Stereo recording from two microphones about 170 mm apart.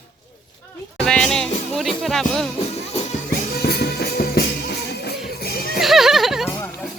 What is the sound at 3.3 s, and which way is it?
Music, 65° left (ahead or behind).